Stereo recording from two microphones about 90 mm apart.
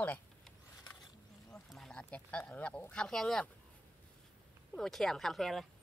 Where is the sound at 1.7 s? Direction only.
5° left (ahead or behind).